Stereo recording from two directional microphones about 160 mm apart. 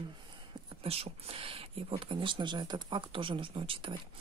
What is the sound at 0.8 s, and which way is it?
Speech, 40° right (ahead or behind).